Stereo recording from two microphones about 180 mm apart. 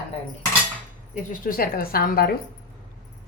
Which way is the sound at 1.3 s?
50° left (ahead or behind).